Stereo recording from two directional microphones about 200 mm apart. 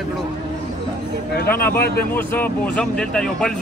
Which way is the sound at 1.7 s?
50° left (ahead or behind).